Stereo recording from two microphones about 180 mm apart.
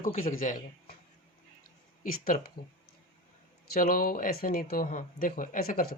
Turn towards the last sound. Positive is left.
turn(degrees=50)  # may be behind; listen again after turning